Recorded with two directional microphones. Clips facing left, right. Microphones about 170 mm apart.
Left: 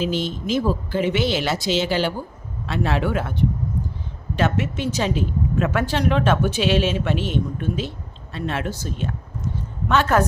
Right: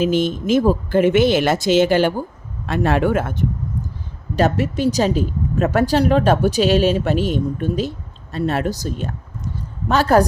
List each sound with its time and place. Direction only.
0.0 s speech: 50° right (ahead or behind)